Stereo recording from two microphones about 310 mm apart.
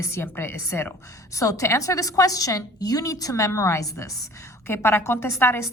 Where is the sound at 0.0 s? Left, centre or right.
Centre.